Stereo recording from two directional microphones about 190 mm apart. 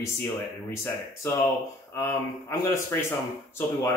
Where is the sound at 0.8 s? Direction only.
15° left (ahead or behind).